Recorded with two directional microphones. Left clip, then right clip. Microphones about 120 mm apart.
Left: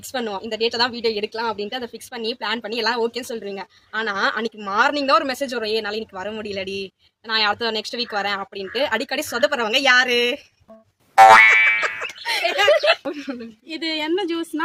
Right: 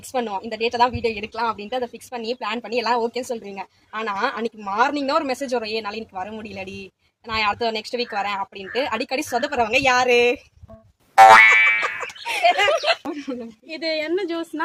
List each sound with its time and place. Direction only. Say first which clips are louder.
0.1 s a woman's voice: right 1 dB; 30° left (ahead or behind)
11.1 s music: even; centre (ahead or behind)
12.4 s speech: even; 30° left (ahead or behind)